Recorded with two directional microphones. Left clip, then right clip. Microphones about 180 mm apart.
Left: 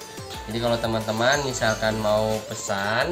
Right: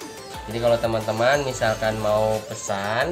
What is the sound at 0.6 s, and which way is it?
Speech, 30° right (ahead or behind).